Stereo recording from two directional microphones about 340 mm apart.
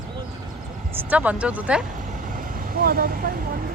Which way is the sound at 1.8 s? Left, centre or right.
Right.